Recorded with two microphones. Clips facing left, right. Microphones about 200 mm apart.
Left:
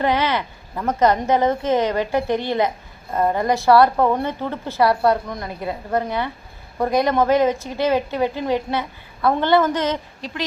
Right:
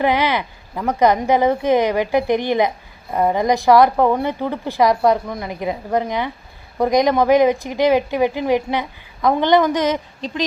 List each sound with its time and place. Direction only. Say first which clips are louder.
0.0 s speech: right 2 dB; 15° right (ahead or behind)